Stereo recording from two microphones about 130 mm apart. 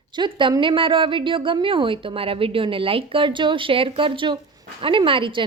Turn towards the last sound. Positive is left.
turn(degrees=-40)  # may be behind; listen again after turning